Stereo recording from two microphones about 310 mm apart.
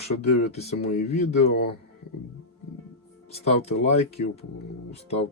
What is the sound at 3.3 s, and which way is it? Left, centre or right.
Speech, left.